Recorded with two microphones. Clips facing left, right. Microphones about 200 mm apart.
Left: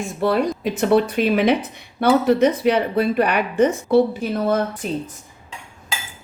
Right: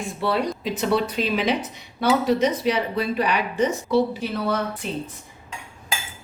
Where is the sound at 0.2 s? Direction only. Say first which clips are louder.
Left 5 dB; 50° left (ahead or behind).